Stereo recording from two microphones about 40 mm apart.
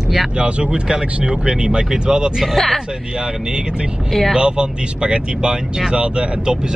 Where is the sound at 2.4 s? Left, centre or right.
Centre.